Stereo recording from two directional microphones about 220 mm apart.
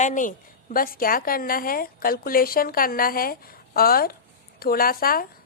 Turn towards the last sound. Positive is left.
turn(degrees=40)  # may be behind; listen again after turning